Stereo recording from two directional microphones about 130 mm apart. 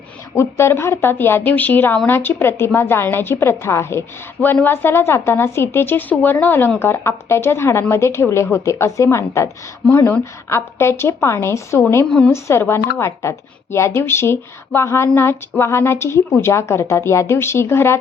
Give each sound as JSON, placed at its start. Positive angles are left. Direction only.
{"t": 0.3, "sound": "a woman's voice", "side_deg": 20}